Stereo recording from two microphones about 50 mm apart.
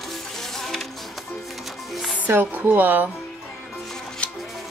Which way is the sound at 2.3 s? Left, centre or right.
Right.